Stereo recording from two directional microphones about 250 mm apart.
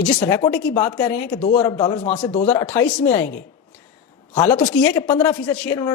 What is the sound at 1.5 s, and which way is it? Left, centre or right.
Speech, left.